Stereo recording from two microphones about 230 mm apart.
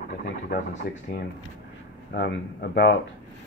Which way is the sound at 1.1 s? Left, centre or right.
Left.